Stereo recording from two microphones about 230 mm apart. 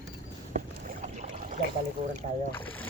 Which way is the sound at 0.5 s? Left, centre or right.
Right.